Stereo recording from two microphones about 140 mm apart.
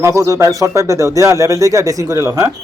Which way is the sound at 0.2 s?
20° right (ahead or behind).